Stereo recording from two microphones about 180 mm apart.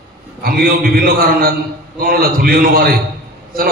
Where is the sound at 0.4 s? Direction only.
55° right (ahead or behind).